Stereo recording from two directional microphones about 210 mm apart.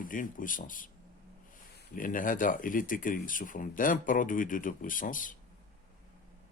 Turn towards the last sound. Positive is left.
turn(degrees=40)  # may be behind; listen again after turning